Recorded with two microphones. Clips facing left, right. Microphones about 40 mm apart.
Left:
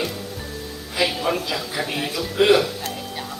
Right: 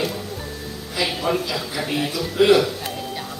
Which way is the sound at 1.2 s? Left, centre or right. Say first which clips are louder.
Right 1 dB; centre.